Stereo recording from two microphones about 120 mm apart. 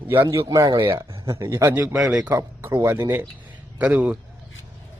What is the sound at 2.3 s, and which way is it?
A man's voice, 20° right (ahead or behind).